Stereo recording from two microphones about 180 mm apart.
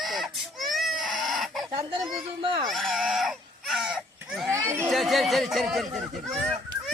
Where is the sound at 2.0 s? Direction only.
Centre (ahead or behind).